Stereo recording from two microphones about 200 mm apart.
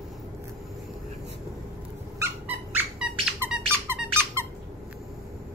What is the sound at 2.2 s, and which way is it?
Squeak, 5° right (ahead or behind).